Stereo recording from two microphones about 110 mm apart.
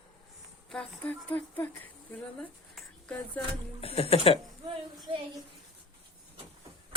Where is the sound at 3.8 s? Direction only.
60° left (ahead or behind).